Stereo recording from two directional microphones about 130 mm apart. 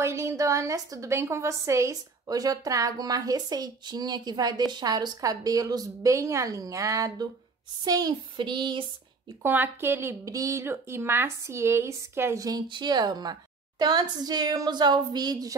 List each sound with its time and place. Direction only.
0.0 s speech: 20° right (ahead or behind)
7.8 s a sound: 30° right (ahead or behind)
9.4 s speech: 15° right (ahead or behind); by 15.5 s 30° right (ahead or behind)